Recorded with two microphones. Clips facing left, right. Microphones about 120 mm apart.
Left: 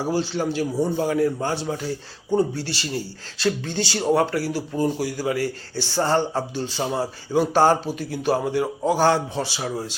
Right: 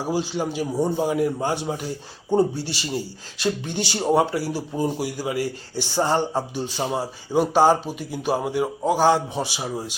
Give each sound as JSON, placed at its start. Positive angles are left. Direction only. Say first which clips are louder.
{"t": 0.0, "sound": "speech", "louder": "left 1 dB", "side_deg": -10}
{"t": 0.9, "sound": "speech", "louder": "left 1 dB", "side_deg": -20}
{"t": 7.5, "sound": "speech", "louder": "right 1 dB", "side_deg": -5}